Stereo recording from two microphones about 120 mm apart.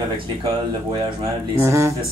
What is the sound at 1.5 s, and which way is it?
Speech, 20° right (ahead or behind).